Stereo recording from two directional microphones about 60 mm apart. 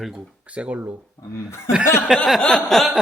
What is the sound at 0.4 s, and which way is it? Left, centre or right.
Speech, right.